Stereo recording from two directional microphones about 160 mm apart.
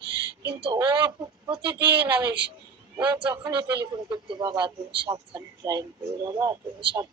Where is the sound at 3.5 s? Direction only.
25° right (ahead or behind).